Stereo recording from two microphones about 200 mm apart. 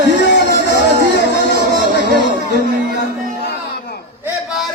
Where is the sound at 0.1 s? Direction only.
60° left (ahead or behind).